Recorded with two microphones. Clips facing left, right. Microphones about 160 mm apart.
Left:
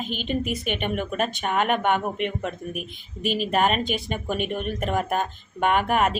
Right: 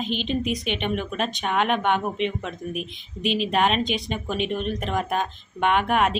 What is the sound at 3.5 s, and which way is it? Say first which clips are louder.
Speech: left 1 dB; 5° left (ahead or behind).